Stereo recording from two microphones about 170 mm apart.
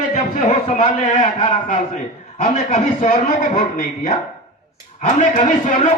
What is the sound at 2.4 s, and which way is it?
A man's voice, 45° left (ahead or behind).